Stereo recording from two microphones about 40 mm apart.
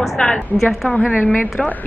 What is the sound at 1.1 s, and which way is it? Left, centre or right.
Speech, left.